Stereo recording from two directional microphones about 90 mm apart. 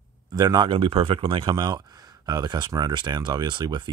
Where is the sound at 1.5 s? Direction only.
50° right (ahead or behind).